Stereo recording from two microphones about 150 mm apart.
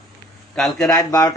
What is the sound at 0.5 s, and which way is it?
Speech, 5° left (ahead or behind).